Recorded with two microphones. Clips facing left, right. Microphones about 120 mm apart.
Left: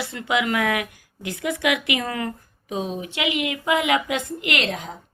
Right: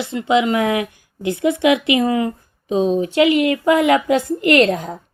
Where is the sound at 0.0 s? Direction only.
20° right (ahead or behind).